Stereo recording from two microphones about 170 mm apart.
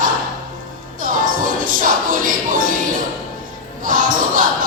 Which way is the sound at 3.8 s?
55° right (ahead or behind).